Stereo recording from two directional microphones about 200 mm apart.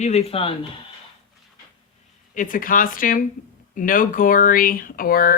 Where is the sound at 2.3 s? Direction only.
40° left (ahead or behind).